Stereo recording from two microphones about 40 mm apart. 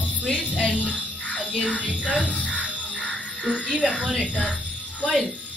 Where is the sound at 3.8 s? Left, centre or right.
Left.